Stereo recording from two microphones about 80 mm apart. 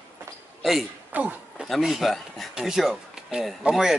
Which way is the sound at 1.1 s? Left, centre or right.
Centre.